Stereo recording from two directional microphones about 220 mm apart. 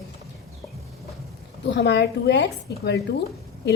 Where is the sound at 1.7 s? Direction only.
50° left (ahead or behind).